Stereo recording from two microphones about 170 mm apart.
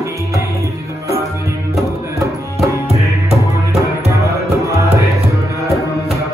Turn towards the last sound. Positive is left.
turn(degrees=-20)  # may be behind; listen again after turning